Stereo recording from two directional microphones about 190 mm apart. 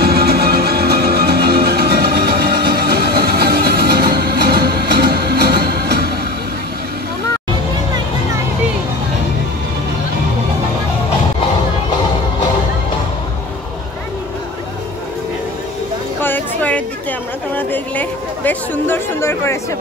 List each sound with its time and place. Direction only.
0.0 s music: 55° right (ahead or behind)
16.2 s music: 10° left (ahead or behind)
17.6 s chatter: 10° left (ahead or behind)